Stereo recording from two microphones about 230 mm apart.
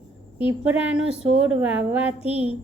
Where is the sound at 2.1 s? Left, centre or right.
Left.